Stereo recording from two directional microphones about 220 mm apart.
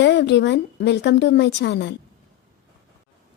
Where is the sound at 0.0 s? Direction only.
50° left (ahead or behind).